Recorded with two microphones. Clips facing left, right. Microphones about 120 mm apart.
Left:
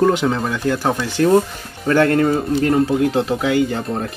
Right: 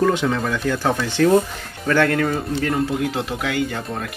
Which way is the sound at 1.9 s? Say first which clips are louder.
Left 4 dB; 25° left (ahead or behind).